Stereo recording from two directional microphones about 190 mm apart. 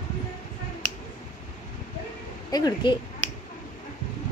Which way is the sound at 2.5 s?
20° left (ahead or behind).